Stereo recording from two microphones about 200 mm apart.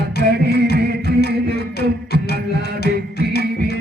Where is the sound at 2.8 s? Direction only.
55° left (ahead or behind).